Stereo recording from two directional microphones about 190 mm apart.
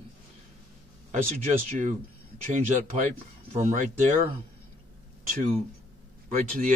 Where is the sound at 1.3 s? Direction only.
40° right (ahead or behind).